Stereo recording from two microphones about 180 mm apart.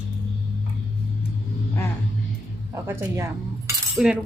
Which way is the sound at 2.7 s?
15° right (ahead or behind).